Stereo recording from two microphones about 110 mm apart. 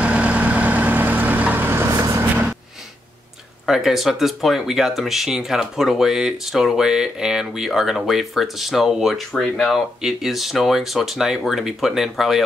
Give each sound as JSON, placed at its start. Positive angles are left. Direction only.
{"t": 0.0, "sound": "vehicle", "side_deg": -10}
{"t": 3.6, "sound": "speech", "side_deg": 0}